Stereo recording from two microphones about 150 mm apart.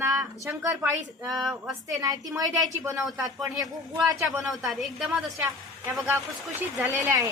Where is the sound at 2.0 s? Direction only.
25° right (ahead or behind).